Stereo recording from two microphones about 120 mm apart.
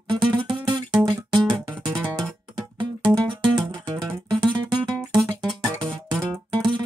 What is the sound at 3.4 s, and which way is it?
Music, 40° right (ahead or behind).